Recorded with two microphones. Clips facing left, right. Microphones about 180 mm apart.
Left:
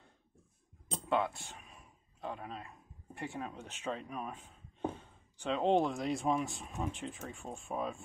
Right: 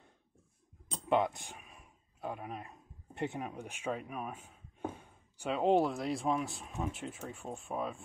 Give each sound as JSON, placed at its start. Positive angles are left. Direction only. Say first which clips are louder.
{"t": 1.0, "sound": "speech", "louder": "right 3 dB", "side_deg": -20}
{"t": 1.6, "sound": "a sound", "louder": "even", "side_deg": -5}
{"t": 3.2, "sound": "speech", "louder": "right 4 dB", "side_deg": -20}